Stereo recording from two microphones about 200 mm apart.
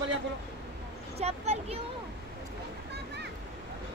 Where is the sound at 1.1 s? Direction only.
30° right (ahead or behind).